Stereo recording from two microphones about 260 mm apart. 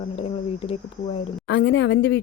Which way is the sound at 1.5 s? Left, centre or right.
Left.